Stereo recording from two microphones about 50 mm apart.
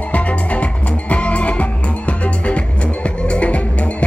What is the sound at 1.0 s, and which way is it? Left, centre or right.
Music, left.